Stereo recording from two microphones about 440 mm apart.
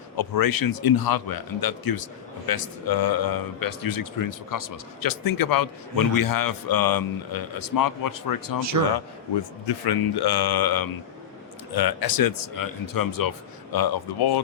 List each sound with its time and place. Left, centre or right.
0.2 s a man's voice: left
8.7 s a man's voice: right
9.6 s a man's voice: left